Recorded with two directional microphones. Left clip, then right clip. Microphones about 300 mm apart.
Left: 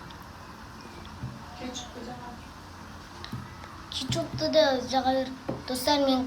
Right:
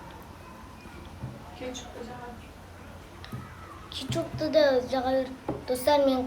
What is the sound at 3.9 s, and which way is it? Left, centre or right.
A woman's voice, centre.